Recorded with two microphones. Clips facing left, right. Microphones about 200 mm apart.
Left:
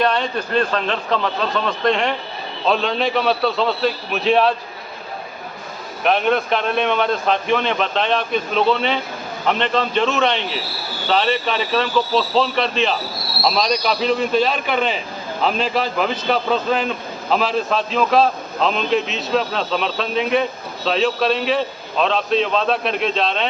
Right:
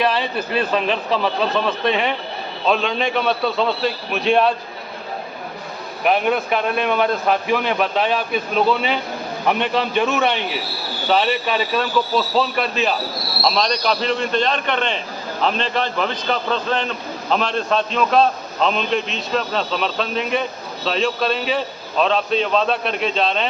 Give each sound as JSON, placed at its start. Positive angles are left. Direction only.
{"t": 0.0, "sound": "a man's voice", "side_deg": -5}
{"t": 6.1, "sound": "a man's voice", "side_deg": -5}